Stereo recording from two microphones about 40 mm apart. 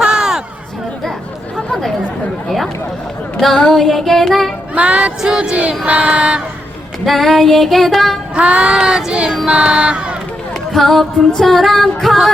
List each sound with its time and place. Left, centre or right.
0.0 s a sound: centre
1.5 s chatter: centre
3.7 s child singing: centre
4.7 s child singing: right
7.0 s music: centre
8.4 s child singing: right
10.7 s music: centre